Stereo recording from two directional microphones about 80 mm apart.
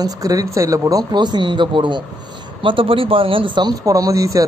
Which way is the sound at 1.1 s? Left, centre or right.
Right.